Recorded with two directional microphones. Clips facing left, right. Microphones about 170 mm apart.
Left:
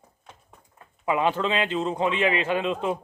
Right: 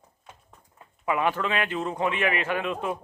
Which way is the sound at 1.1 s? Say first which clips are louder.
Left 2 dB; 20° left (ahead or behind).